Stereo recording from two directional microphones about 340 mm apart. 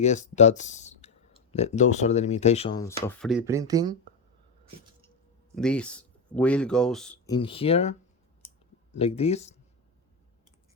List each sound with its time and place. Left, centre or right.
0.0 s speech: centre
5.5 s speech: centre
7.3 s speech: centre